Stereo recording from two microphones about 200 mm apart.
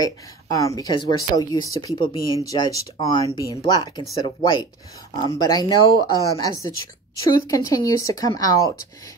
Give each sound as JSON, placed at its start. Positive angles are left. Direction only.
{"t": 0.0, "sound": "speech", "side_deg": 15}